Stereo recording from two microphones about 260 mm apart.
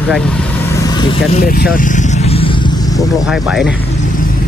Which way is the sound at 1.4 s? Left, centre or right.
Left.